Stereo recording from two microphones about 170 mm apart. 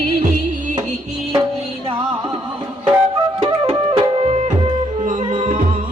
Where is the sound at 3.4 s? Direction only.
35° right (ahead or behind).